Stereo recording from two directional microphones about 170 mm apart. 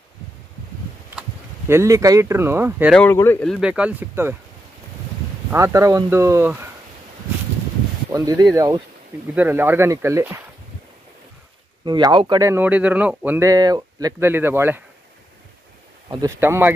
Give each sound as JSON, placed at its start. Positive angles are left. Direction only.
{"t": 1.7, "sound": "speech", "side_deg": -15}
{"t": 2.9, "sound": "speech", "side_deg": 10}
{"t": 3.5, "sound": "speech", "side_deg": -5}
{"t": 5.5, "sound": "speech", "side_deg": -15}
{"t": 8.1, "sound": "speech", "side_deg": -20}
{"t": 11.8, "sound": "speech", "side_deg": -25}
{"t": 12.4, "sound": "speech", "side_deg": -10}
{"t": 16.1, "sound": "speech", "side_deg": -20}